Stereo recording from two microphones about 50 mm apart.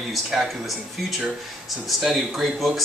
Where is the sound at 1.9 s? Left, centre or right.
Centre.